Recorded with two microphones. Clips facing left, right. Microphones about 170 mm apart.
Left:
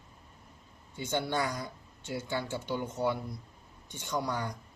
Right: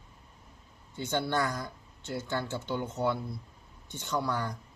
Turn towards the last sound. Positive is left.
turn(degrees=15)  # may be behind; listen again after turning